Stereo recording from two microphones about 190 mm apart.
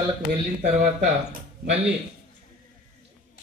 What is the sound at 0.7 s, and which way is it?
Speech, 40° right (ahead or behind).